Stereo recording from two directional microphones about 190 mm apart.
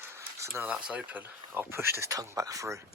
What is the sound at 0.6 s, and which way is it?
Speech, 5° right (ahead or behind).